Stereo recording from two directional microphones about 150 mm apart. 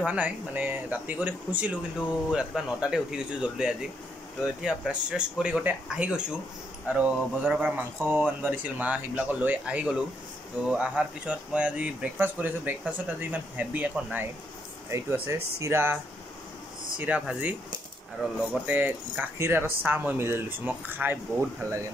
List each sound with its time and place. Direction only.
0.0 s speech: 10° right (ahead or behind)
17.0 s speech: 10° right (ahead or behind)